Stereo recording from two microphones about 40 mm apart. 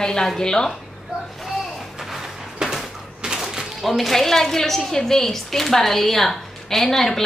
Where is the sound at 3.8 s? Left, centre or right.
Centre.